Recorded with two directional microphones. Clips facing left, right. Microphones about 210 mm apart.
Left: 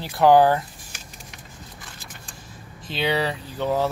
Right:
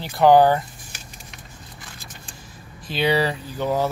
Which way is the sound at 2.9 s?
Centre (ahead or behind).